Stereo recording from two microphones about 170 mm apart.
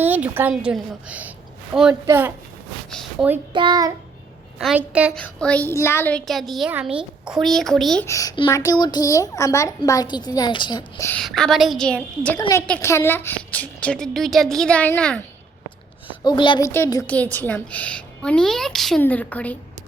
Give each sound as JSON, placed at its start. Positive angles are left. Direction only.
{"t": 0.0, "sound": "a woman's voice", "side_deg": -10}
{"t": 2.9, "sound": "a woman's voice", "side_deg": 0}
{"t": 3.5, "sound": "child singing", "side_deg": -30}
{"t": 4.5, "sound": "a woman's voice", "side_deg": -5}
{"t": 5.1, "sound": "a woman's voice", "side_deg": 5}
{"t": 8.0, "sound": "a woman's voice", "side_deg": 20}
{"t": 11.1, "sound": "a woman's voice", "side_deg": 5}
{"t": 12.4, "sound": "a woman's voice", "side_deg": 20}
{"t": 16.0, "sound": "a child's voice", "side_deg": 30}
{"t": 16.6, "sound": "a woman's voice", "side_deg": 15}